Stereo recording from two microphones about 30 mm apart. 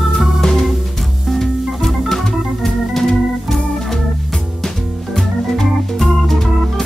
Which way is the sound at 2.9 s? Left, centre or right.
Centre.